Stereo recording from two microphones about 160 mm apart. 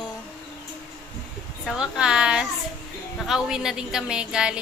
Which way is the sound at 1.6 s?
5° right (ahead or behind).